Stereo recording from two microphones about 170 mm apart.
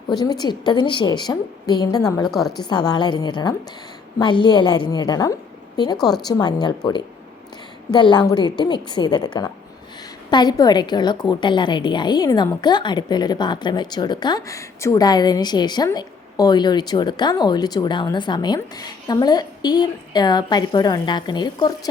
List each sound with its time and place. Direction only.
0.2 s a woman's voice: 25° left (ahead or behind)
2.2 s a woman's voice: centre (ahead or behind)
2.6 s a woman's voice: 25° left (ahead or behind)
6.0 s a woman's voice: centre (ahead or behind)
6.2 s a woman's voice: 25° left (ahead or behind)